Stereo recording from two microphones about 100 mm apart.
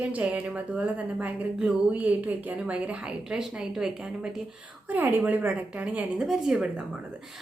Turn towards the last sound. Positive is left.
turn(degrees=-5)  # may be behind; listen again after turning